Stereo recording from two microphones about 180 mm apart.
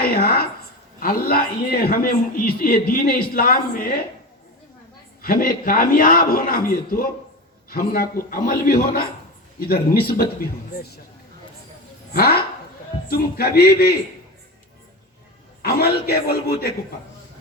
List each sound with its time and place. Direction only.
0.0 s a sound: 55° left (ahead or behind)
0.9 s a man's voice: 55° left (ahead or behind)
5.2 s a man's voice: 55° left (ahead or behind)
12.1 s a man's voice: 60° left (ahead or behind)
15.6 s a man's voice: 60° left (ahead or behind)